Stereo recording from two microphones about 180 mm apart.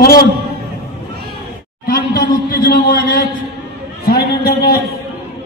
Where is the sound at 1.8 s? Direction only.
55° left (ahead or behind).